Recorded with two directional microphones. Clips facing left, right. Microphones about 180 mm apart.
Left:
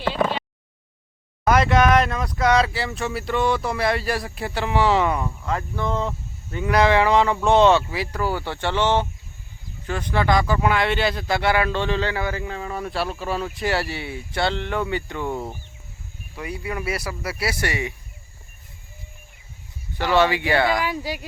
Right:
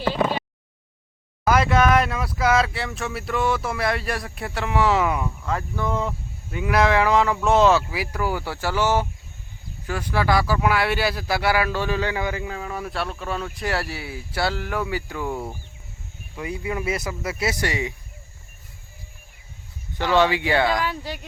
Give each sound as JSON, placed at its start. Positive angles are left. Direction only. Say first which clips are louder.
{"t": 1.5, "sound": "speech", "louder": "left 1 dB", "side_deg": -5}
{"t": 12.5, "sound": "speech", "louder": "left 1 dB", "side_deg": -5}
{"t": 15.3, "sound": "speech", "louder": "left 1 dB", "side_deg": 15}
{"t": 16.4, "sound": "speech", "louder": "right 2 dB", "side_deg": -20}
{"t": 20.1, "sound": "speech", "louder": "even", "side_deg": -15}
{"t": 20.7, "sound": "speech", "louder": "left 1 dB", "side_deg": 10}